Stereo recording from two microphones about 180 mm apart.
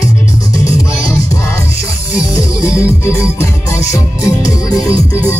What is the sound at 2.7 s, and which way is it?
Music, 15° left (ahead or behind).